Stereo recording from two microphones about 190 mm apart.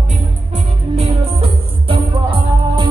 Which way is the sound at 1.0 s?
30° right (ahead or behind).